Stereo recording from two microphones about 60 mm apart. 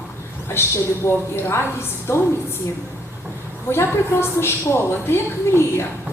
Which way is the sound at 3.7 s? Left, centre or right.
Left.